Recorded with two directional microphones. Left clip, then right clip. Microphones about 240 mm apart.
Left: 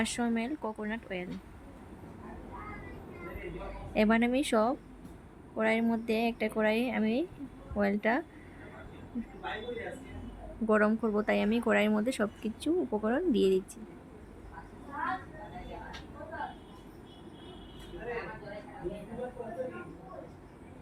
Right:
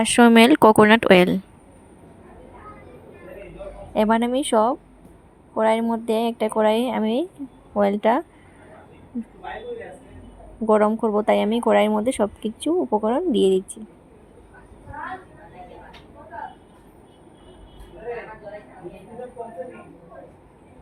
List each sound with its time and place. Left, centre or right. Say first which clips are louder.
0.0 s speech: right 19 dB; right
3.9 s speech: right 8 dB; centre
10.7 s speech: right 10 dB; centre